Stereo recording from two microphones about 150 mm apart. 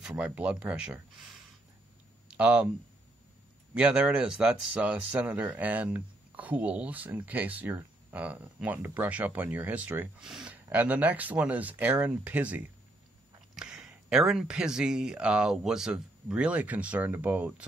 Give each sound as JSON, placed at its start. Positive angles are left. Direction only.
{"t": 0.0, "sound": "speech", "side_deg": -10}
{"t": 2.3, "sound": "speech", "side_deg": -10}
{"t": 3.7, "sound": "speech", "side_deg": -5}